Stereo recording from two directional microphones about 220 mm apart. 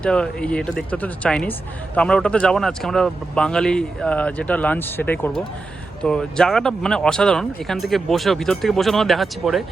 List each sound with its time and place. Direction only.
0.0 s speech: 5° left (ahead or behind)